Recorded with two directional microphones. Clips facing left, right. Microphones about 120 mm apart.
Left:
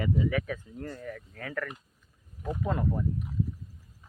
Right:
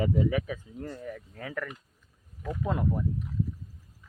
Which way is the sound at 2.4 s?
25° left (ahead or behind).